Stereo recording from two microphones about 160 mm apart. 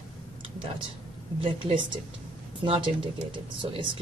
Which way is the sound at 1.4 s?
30° right (ahead or behind).